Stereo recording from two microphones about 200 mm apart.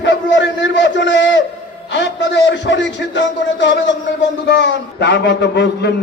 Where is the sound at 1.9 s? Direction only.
65° left (ahead or behind).